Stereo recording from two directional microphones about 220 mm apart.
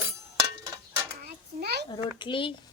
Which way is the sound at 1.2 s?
45° right (ahead or behind).